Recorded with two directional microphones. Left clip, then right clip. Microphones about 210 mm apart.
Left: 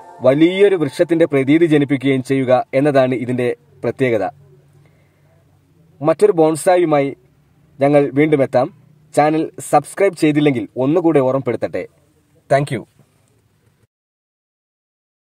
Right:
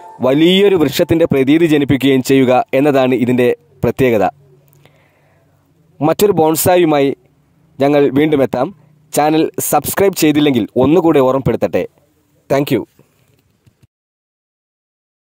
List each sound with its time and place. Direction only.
0.2 s a man's voice: 35° right (ahead or behind)
5.9 s a man's voice: 40° right (ahead or behind)